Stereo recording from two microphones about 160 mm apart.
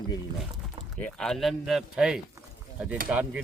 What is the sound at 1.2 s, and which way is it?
A man's voice, centre (ahead or behind).